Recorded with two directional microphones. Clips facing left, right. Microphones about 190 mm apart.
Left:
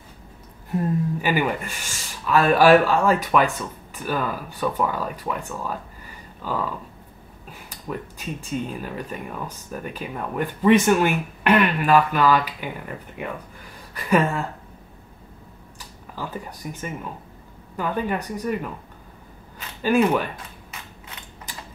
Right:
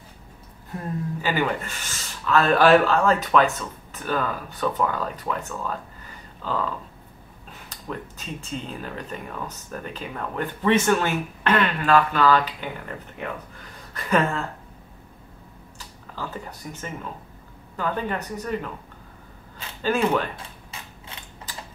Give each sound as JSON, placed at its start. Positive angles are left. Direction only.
{"t": 0.7, "sound": "speech", "side_deg": 15}
{"t": 7.7, "sound": "speech", "side_deg": 10}
{"t": 15.8, "sound": "speech", "side_deg": 15}
{"t": 19.8, "sound": "speech", "side_deg": 10}
{"t": 20.7, "sound": "typewriter", "side_deg": -30}